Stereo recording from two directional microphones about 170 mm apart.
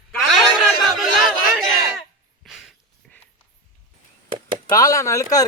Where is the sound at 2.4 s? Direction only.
Centre (ahead or behind).